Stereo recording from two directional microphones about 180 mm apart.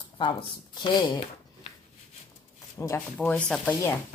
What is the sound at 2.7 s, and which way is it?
Speech, 15° left (ahead or behind).